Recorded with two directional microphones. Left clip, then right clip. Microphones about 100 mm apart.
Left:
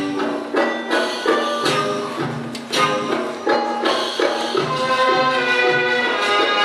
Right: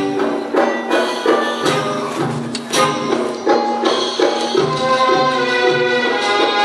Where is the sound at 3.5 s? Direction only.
20° left (ahead or behind).